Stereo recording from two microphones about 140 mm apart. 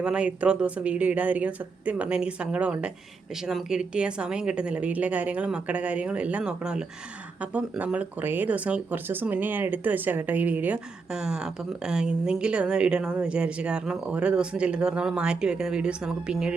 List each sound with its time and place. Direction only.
0.0 s a woman's voice: 5° right (ahead or behind)